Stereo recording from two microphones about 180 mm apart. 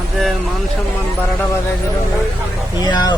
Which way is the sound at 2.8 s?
20° left (ahead or behind).